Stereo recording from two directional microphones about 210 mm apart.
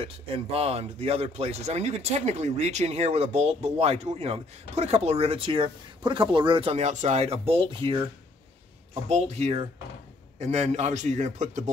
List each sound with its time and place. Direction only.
0.0 s speech: 30° right (ahead or behind)
9.1 s a man's voice: 30° right (ahead or behind)